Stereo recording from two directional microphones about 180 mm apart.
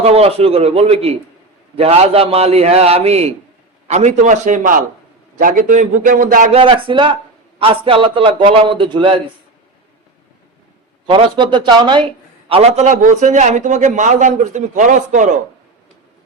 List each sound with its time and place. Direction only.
0.0 s a man's voice: 35° right (ahead or behind)
6.6 s a man's voice: 30° right (ahead or behind)
11.0 s a man's voice: 30° right (ahead or behind); by 15.3 s 45° right (ahead or behind)